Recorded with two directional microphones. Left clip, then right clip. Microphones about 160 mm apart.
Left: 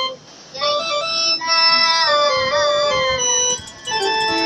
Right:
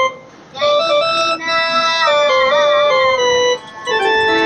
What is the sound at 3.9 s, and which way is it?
Music, 20° right (ahead or behind).